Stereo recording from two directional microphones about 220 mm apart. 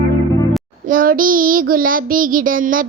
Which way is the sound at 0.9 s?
40° right (ahead or behind).